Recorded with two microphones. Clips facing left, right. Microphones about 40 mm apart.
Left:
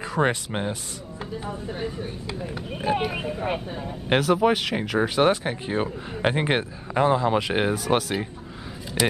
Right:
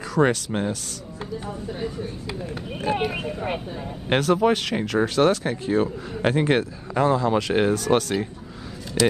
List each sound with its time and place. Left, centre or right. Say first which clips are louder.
0.1 s speech: right 3 dB; left
2.5 s speech: even; centre